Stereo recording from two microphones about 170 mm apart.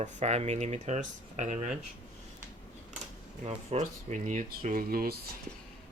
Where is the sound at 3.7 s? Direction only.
45° right (ahead or behind).